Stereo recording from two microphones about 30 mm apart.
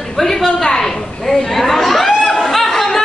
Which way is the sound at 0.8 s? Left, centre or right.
Centre.